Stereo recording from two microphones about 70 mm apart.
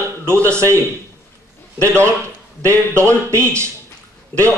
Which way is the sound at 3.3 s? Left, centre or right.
Right.